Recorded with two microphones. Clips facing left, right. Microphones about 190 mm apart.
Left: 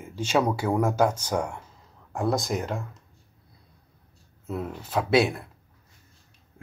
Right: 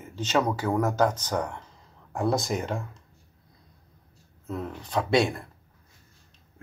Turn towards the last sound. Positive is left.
turn(degrees=0)  # may be behind; listen again after turning